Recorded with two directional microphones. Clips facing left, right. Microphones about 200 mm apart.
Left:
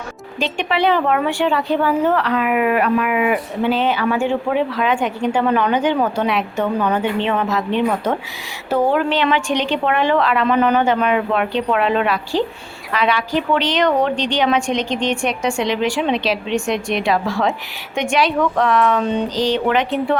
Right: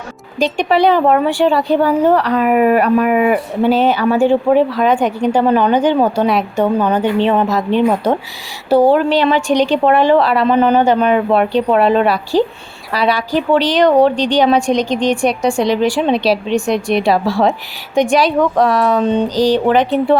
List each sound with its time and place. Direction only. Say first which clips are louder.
0.3 s speech: right 6 dB; 40° right (ahead or behind)